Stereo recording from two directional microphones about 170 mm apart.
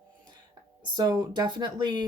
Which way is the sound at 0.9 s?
20° right (ahead or behind).